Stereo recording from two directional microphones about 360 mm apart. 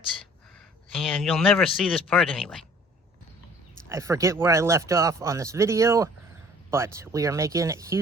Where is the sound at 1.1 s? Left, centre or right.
Centre.